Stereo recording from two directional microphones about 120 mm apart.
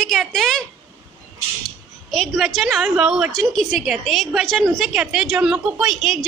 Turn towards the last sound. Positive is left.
turn(degrees=0)  # may be behind; listen again after turning